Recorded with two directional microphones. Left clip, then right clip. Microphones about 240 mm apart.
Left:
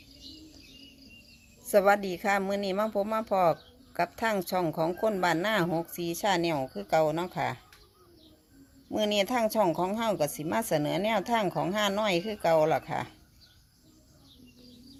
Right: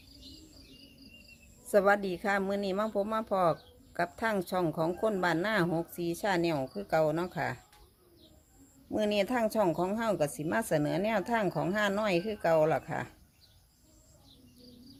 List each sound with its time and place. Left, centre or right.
1.6 s a woman's voice: centre
8.9 s a woman's voice: centre